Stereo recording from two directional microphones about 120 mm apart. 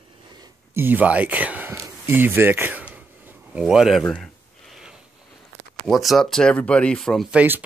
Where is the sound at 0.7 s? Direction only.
15° right (ahead or behind).